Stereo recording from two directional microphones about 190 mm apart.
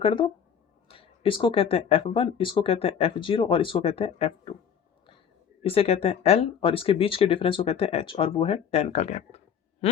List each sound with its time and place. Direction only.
0.0 s speech: 25° left (ahead or behind)
5.6 s speech: 30° left (ahead or behind)
9.8 s a sound: 30° left (ahead or behind)